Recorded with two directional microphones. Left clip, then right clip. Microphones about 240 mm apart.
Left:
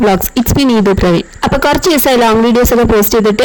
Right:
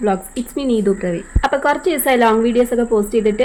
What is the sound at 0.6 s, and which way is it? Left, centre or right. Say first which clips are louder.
Speech: left 6 dB; left.